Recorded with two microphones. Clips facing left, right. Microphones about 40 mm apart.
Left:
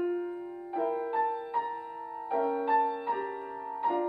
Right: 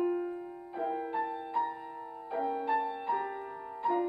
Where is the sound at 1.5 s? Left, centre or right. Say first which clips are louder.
Left 1 dB; centre.